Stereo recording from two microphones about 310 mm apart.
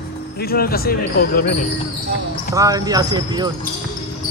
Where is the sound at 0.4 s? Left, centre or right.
Left.